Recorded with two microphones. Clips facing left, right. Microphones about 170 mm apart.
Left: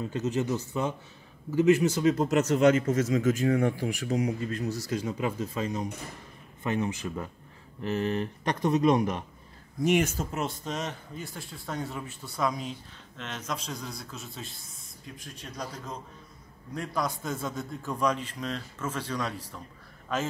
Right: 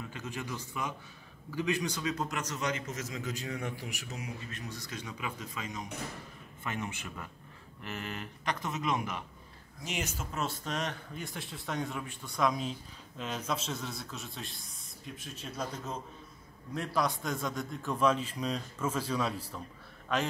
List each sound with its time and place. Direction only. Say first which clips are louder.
0.0 s speech: left 11 dB; 25° left (ahead or behind)
2.5 s speech: left 14 dB; 50° left (ahead or behind)
3.8 s speech: left 14 dB; 30° left (ahead or behind)
9.8 s speech: left 13 dB; 60° left (ahead or behind)
10.3 s a man's voice: left 3 dB; 15° left (ahead or behind); by 15.7 s 5° right (ahead or behind)
16.7 s a man's voice: even; centre (ahead or behind)